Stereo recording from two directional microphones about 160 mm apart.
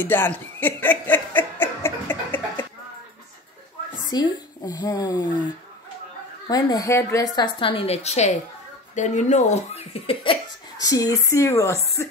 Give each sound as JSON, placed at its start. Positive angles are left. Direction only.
{"t": 0.0, "sound": "chuckle", "side_deg": 10}
{"t": 4.1, "sound": "speech", "side_deg": 25}
{"t": 7.6, "sound": "a woman's voice", "side_deg": 35}
{"t": 10.8, "sound": "speech", "side_deg": 25}